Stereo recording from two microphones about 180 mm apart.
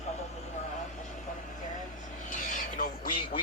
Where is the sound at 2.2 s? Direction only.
45° left (ahead or behind).